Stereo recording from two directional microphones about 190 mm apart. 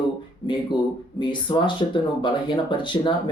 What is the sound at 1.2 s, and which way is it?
Speech, 25° left (ahead or behind).